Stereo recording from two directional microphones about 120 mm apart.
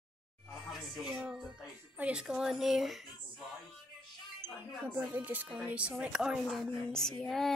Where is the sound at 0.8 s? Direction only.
Centre (ahead or behind).